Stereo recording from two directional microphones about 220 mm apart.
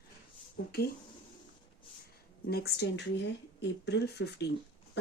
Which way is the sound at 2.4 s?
45° left (ahead or behind).